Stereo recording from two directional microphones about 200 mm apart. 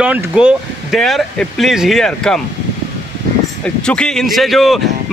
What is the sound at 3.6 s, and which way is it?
A man's voice, 5° left (ahead or behind).